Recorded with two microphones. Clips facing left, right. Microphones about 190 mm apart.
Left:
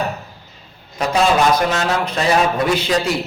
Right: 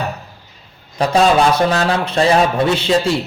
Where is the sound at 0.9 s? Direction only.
30° right (ahead or behind).